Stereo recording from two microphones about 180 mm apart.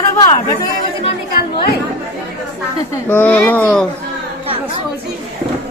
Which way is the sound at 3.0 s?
10° left (ahead or behind).